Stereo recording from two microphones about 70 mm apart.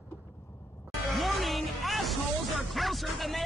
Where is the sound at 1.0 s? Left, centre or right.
Centre.